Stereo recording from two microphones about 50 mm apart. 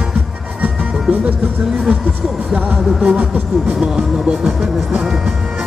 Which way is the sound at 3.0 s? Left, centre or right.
Right.